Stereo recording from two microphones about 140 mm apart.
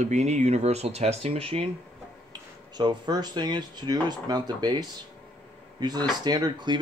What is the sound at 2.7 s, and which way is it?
Speech, 30° right (ahead or behind).